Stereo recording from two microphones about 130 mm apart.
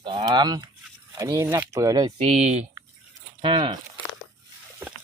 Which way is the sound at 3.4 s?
40° right (ahead or behind).